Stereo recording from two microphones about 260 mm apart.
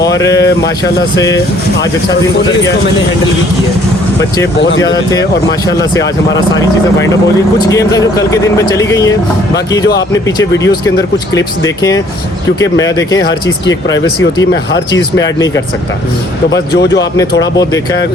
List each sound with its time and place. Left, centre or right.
0.2 s speech: centre
5.7 s speech: centre
10.2 s speech: centre
13.2 s speech: left
16.5 s speech: left